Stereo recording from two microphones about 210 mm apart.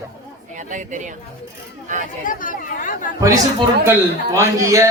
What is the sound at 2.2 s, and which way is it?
Speech, 40° left (ahead or behind).